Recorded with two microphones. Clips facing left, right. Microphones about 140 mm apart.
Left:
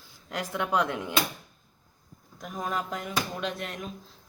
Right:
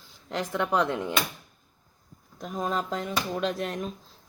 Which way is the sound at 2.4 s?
25° right (ahead or behind).